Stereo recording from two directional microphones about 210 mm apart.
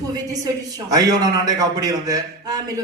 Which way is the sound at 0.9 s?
15° right (ahead or behind).